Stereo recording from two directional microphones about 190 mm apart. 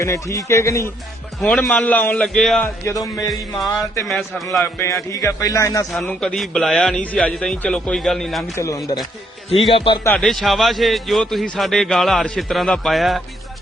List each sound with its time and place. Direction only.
0.0 s a man's voice: 15° left (ahead or behind)
1.4 s a man's voice: centre (ahead or behind)
2.6 s speech: 15° left (ahead or behind)
3.2 s a man's voice: centre (ahead or behind)
4.5 s a man's voice: 10° left (ahead or behind)
5.9 s a man's voice: 5° left (ahead or behind)
8.5 s a man's voice: 15° left (ahead or behind)
9.5 s speech: 30° left (ahead or behind)
10.2 s a man's voice: centre (ahead or behind)